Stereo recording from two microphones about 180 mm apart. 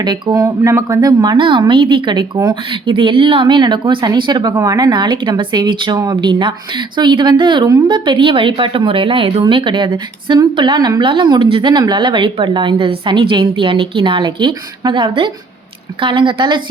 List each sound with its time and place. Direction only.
0.0 s speech: 25° right (ahead or behind)